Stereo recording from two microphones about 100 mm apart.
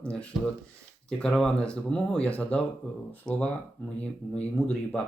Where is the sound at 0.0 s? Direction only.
10° left (ahead or behind).